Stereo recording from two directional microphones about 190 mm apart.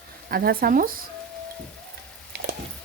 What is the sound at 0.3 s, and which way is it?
Speech, 50° right (ahead or behind).